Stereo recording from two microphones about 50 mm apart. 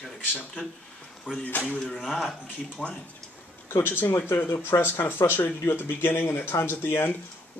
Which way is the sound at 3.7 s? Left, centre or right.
Left.